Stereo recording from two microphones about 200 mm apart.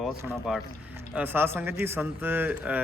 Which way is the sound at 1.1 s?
10° right (ahead or behind).